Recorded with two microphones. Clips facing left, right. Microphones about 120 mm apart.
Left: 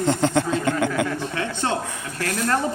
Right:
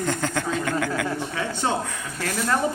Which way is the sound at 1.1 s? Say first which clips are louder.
Left 1 dB; 15° right (ahead or behind).